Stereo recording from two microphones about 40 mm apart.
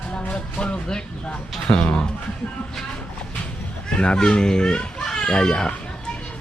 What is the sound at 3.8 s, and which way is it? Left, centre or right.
A child's voice, left.